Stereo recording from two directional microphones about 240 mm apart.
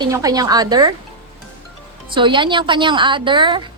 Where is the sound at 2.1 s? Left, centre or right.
Centre.